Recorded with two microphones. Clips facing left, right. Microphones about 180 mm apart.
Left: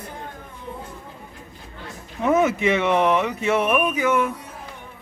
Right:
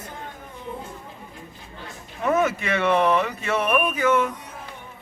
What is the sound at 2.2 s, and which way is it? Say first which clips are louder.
A man's voice: left 3 dB; 20° left (ahead or behind).